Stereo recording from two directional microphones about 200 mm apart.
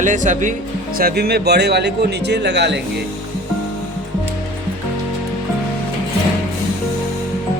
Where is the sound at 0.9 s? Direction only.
50° right (ahead or behind).